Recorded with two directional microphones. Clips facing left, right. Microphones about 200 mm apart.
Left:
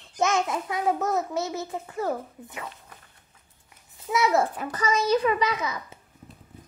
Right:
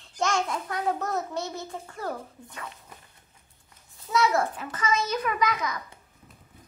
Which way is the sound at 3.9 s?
20° left (ahead or behind).